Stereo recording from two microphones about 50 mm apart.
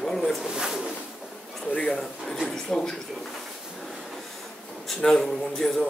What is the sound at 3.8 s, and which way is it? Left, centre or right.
Train, centre.